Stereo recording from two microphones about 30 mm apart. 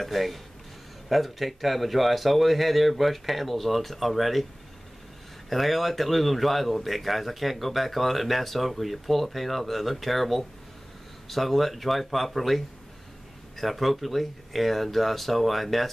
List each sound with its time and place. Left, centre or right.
0.0 s speech: centre
5.5 s speech: centre